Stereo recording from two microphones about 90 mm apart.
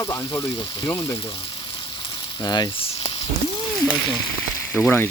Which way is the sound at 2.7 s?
90° left.